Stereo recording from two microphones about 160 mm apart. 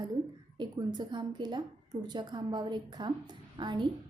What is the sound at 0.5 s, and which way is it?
A woman's voice, 30° right (ahead or behind).